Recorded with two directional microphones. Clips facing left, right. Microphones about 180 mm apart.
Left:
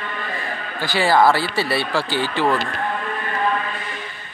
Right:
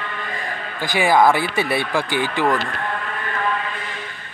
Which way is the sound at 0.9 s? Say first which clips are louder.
Even; 15° right (ahead or behind).